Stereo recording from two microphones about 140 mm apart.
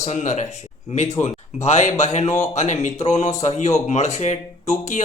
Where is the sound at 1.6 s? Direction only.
55° left (ahead or behind).